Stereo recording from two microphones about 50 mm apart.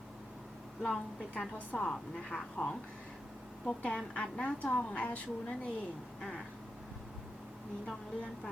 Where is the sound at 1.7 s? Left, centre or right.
Centre; by 5.2 s left.